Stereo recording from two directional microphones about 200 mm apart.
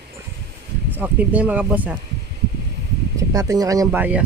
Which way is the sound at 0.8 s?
10° right (ahead or behind).